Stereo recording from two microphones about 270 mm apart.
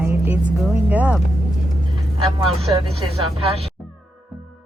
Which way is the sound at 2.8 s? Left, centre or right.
Right.